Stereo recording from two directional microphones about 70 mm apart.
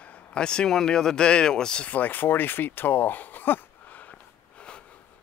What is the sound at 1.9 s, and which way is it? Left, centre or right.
Speech, left.